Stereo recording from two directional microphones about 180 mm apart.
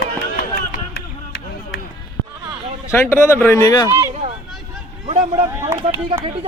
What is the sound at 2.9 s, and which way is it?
Speech, 15° left (ahead or behind).